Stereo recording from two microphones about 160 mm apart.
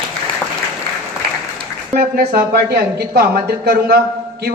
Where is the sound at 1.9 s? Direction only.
75° right (ahead or behind).